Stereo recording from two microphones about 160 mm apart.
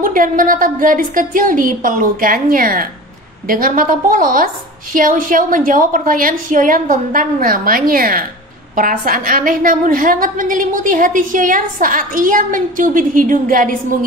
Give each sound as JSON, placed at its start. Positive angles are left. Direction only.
{"t": 0.0, "sound": "a woman's voice", "side_deg": -55}